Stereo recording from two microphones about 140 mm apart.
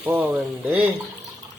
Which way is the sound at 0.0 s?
15° right (ahead or behind).